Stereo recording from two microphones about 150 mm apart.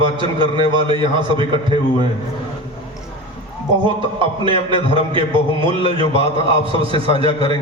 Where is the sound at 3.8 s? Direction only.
35° right (ahead or behind).